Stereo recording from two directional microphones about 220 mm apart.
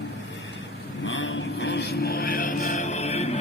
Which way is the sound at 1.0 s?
60° left (ahead or behind).